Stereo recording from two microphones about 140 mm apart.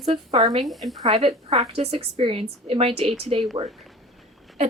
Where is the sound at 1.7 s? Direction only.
45° right (ahead or behind).